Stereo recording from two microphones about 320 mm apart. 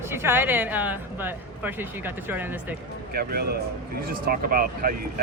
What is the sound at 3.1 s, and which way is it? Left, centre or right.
Speech, right.